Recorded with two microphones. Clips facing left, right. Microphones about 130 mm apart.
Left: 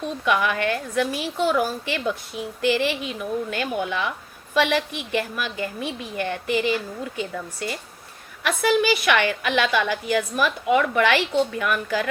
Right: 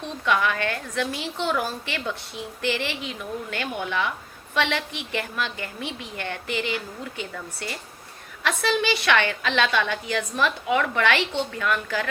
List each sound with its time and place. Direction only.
0.0 s a woman's voice: 15° left (ahead or behind)